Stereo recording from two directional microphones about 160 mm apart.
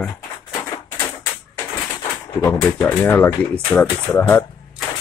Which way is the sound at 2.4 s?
15° left (ahead or behind).